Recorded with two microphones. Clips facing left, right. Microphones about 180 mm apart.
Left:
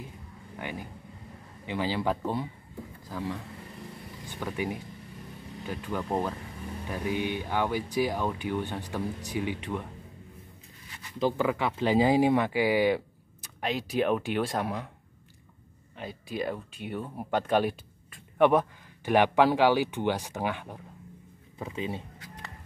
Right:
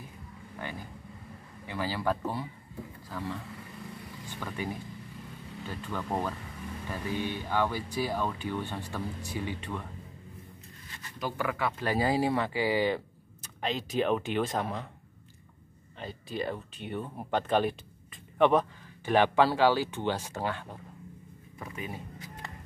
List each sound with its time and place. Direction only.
0.6 s speech: 15° left (ahead or behind)
11.1 s speech: 25° left (ahead or behind); by 14.9 s 10° left (ahead or behind)
16.0 s speech: 10° left (ahead or behind)
21.5 s speech: 25° left (ahead or behind)